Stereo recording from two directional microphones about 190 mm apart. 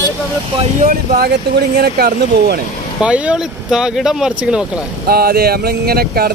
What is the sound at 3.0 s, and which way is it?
Speech, 5° right (ahead or behind).